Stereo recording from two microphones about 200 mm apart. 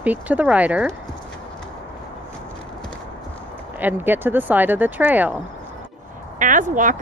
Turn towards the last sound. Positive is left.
turn(degrees=-40)  # may be behind; listen again after turning